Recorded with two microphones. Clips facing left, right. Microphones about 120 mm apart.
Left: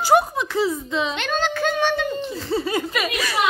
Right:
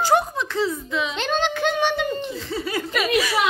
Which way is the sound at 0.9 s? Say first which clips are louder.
Left 2 dB; 30° left (ahead or behind).